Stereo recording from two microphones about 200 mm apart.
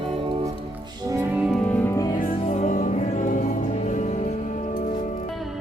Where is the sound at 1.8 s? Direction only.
15° left (ahead or behind).